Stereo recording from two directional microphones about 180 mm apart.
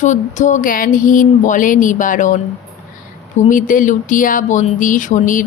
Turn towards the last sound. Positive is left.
turn(degrees=45)  # may be behind; listen again after turning